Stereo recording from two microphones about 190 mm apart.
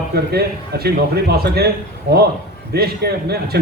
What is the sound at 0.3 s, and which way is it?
A man's voice, 55° right (ahead or behind).